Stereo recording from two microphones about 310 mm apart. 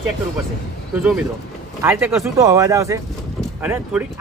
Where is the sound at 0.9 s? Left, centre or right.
Centre.